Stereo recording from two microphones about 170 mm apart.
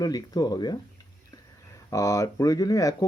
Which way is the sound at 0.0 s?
20° left (ahead or behind).